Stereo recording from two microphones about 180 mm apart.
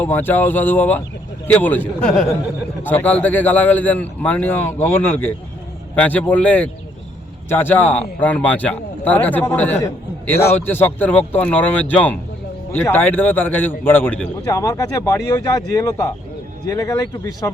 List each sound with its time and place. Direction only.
0.0 s a man's voice: 10° left (ahead or behind)